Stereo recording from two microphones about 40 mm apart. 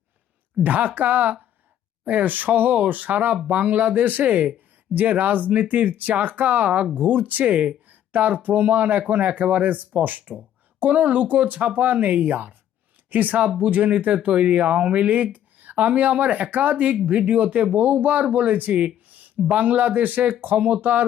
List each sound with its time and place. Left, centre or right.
0.6 s speech: right